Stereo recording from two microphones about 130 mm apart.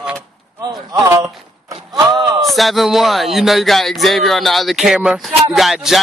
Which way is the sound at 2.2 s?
30° right (ahead or behind).